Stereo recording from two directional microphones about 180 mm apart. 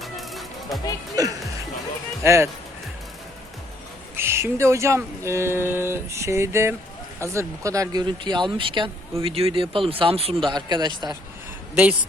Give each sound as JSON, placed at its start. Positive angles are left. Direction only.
{"t": 0.0, "sound": "music", "side_deg": 0}
{"t": 1.2, "sound": "speech", "side_deg": -20}
{"t": 4.1, "sound": "speech", "side_deg": -15}